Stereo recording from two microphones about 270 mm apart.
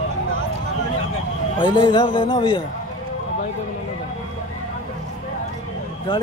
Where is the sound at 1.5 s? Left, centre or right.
Centre.